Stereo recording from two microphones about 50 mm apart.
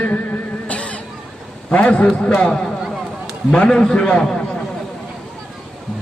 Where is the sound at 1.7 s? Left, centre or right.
Left.